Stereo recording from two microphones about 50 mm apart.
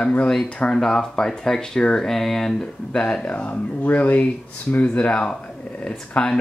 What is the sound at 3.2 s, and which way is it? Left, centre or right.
Speech, left.